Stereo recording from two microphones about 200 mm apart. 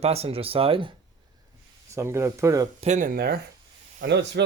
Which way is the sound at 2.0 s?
15° right (ahead or behind).